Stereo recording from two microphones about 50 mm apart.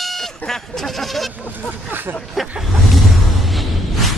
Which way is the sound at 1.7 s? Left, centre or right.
Right.